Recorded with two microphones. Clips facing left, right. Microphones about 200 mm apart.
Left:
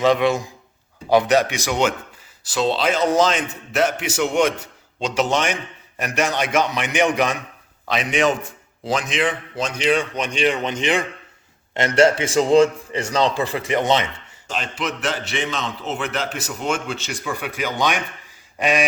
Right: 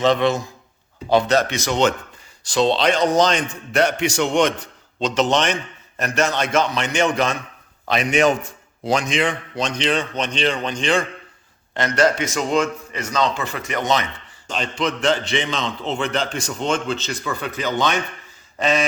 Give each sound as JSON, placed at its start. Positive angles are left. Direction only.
{"t": 0.0, "sound": "a man's voice", "side_deg": 10}
{"t": 7.9, "sound": "a man's voice", "side_deg": 0}
{"t": 14.4, "sound": "a man's voice", "side_deg": 5}